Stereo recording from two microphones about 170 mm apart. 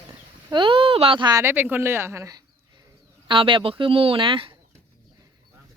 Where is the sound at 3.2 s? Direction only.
30° right (ahead or behind).